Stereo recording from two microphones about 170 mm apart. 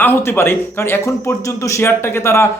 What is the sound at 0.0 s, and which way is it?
A man's voice, 15° left (ahead or behind).